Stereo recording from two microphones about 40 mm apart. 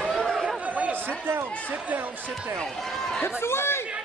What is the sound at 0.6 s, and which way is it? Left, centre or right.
Chatter, right.